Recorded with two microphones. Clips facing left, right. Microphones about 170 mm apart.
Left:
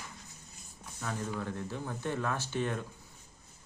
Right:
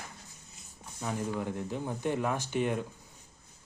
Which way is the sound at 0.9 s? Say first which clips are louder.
Right 3 dB; 15° right (ahead or behind).